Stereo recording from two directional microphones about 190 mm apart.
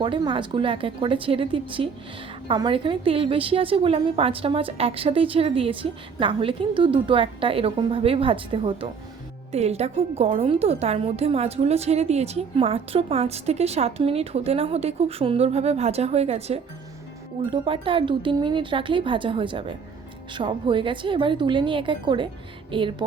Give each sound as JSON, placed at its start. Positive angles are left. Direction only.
{"t": 0.0, "sound": "a woman's voice", "side_deg": -25}